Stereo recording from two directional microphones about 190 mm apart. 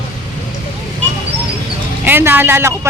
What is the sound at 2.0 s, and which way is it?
Speech, 10° right (ahead or behind).